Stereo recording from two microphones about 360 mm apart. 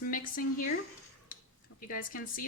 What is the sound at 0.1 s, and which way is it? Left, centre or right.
Speech, left.